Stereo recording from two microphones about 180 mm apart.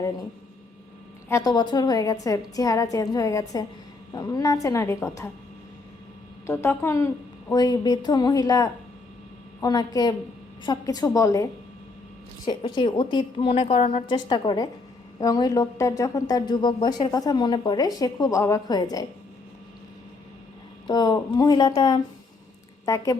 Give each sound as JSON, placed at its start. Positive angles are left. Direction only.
{"t": 1.3, "sound": "a woman's voice", "side_deg": 20}
{"t": 6.5, "sound": "a woman's voice", "side_deg": 15}
{"t": 12.5, "sound": "a woman's voice", "side_deg": 25}
{"t": 20.8, "sound": "a woman's voice", "side_deg": 20}